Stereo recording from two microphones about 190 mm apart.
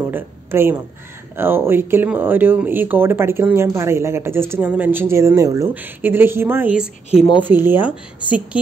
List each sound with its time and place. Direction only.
0.1 s a woman's voice: 10° right (ahead or behind)
7.1 s speech: 30° left (ahead or behind)
7.4 s speech: 10° right (ahead or behind)